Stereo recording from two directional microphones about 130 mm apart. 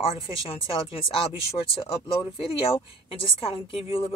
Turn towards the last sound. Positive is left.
turn(degrees=45)  # may be behind; listen again after turning